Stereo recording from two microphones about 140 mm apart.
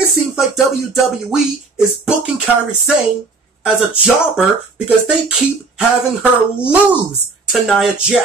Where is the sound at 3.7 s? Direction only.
5° right (ahead or behind).